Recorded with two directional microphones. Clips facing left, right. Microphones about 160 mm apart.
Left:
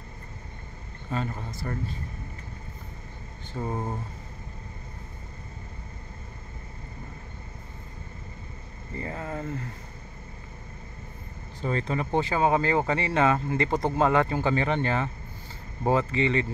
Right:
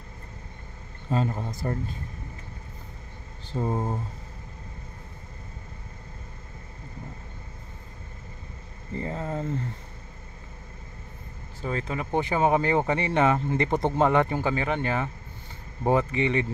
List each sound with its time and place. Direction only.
1.1 s speech: 35° right (ahead or behind)
3.5 s speech: 15° right (ahead or behind)
8.9 s speech: 20° right (ahead or behind)
11.6 s speech: 5° right (ahead or behind)
12.2 s speech: 20° right (ahead or behind)